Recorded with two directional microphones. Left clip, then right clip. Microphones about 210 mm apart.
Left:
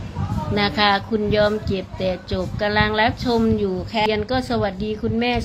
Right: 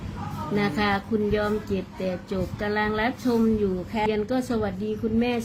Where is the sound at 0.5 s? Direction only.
5° right (ahead or behind).